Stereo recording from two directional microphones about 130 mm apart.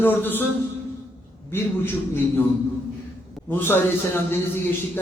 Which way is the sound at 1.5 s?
20° left (ahead or behind).